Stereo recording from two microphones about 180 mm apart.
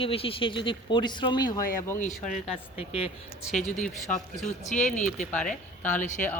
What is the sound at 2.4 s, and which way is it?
Speech, 30° left (ahead or behind).